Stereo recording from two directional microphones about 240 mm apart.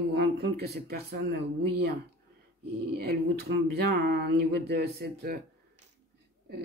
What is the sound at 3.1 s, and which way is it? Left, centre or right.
Speech, right.